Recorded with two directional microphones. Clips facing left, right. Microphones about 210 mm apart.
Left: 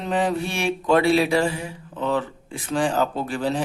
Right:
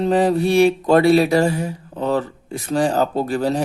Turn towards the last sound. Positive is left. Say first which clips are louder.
# right 5 dB
turn(degrees=-40)  # may be behind; listen again after turning